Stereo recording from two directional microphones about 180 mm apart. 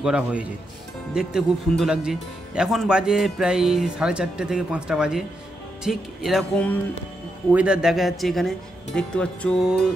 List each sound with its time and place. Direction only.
0.0 s speech: 5° right (ahead or behind)
7.5 s speech: 5° right (ahead or behind)